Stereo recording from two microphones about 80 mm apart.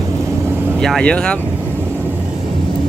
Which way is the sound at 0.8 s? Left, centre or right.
Centre.